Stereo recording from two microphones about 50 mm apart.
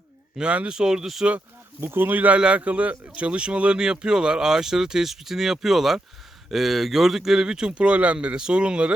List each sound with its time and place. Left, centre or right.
0.3 s speech: right
0.7 s speech: centre
1.8 s speech: right
2.1 s speech: right